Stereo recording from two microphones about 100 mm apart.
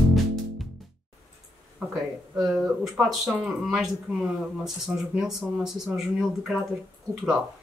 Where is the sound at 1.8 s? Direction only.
10° right (ahead or behind).